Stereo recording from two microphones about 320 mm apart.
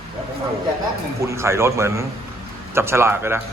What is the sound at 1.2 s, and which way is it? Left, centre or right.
A man's voice, centre.